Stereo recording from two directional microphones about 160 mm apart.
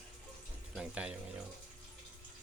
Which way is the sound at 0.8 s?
5° right (ahead or behind).